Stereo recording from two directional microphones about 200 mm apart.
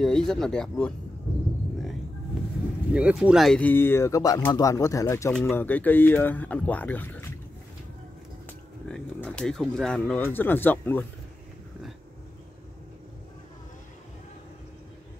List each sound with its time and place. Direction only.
0.0 s speech: centre (ahead or behind)
2.9 s speech: 5° right (ahead or behind)
8.8 s speech: 5° left (ahead or behind)